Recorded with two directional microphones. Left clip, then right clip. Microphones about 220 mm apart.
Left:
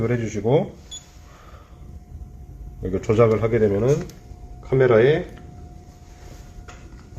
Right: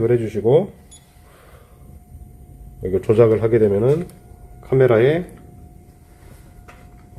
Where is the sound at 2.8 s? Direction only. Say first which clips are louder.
Right 4 dB; 25° right (ahead or behind).